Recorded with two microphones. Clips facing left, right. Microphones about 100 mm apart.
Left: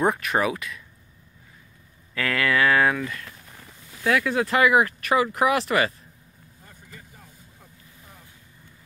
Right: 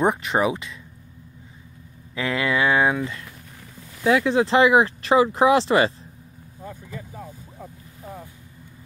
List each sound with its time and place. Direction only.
0.0 s speech: 20° right (ahead or behind)
2.1 s speech: 20° right (ahead or behind)